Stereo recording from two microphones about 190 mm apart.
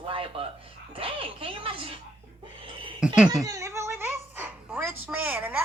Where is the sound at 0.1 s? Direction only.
30° right (ahead or behind).